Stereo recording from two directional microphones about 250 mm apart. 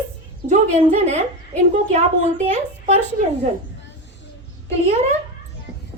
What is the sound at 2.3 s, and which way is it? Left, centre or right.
Speech, right.